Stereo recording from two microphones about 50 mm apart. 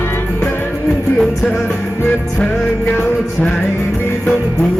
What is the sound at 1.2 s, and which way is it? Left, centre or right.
Music, centre.